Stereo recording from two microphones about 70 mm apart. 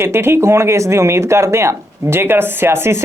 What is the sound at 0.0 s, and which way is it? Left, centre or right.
Speech, right.